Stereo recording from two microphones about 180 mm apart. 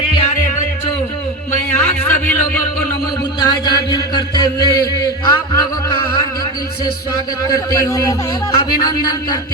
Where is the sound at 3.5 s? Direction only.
25° left (ahead or behind).